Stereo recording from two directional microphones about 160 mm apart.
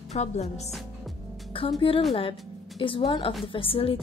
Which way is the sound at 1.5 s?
35° left (ahead or behind).